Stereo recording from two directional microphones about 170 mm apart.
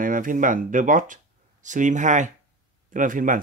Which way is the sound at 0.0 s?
50° right (ahead or behind).